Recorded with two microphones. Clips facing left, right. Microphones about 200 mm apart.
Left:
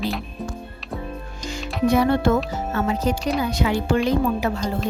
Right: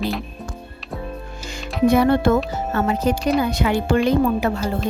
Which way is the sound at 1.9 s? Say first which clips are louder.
Right 2 dB; 55° right (ahead or behind).